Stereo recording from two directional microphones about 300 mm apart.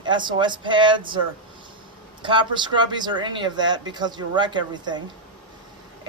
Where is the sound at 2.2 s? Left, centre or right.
Centre.